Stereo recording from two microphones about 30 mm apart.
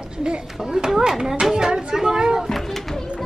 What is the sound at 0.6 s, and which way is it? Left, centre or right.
A woman's voice, centre.